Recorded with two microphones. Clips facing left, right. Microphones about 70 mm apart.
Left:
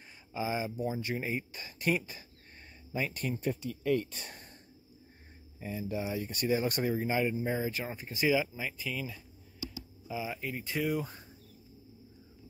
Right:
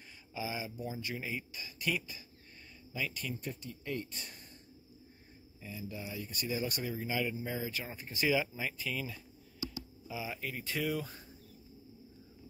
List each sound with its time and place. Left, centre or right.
0.0 s speech: left
3.4 s speech: left
5.6 s speech: left
8.0 s speech: centre